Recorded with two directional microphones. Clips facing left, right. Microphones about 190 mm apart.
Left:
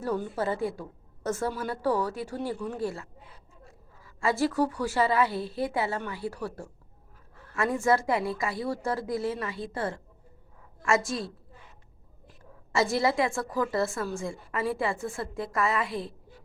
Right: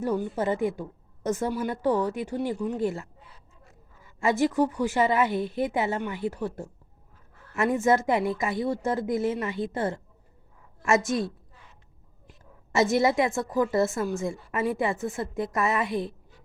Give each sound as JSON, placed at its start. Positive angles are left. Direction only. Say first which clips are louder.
{"t": 0.0, "sound": "a woman's voice", "louder": "right 3 dB", "side_deg": -15}
{"t": 12.7, "sound": "a woman's voice", "louder": "right 3 dB", "side_deg": -20}